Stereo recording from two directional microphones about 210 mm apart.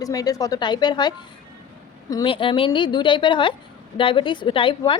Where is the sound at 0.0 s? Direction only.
15° left (ahead or behind).